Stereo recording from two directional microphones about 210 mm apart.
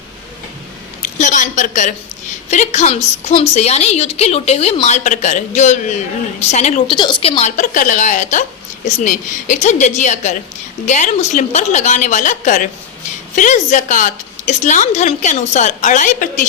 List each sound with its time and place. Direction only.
1.0 s a woman's voice: 35° left (ahead or behind)